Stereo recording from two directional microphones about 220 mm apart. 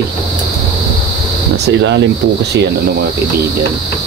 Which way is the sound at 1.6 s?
55° right (ahead or behind).